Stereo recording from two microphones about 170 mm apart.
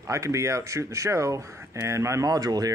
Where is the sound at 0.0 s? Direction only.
20° right (ahead or behind).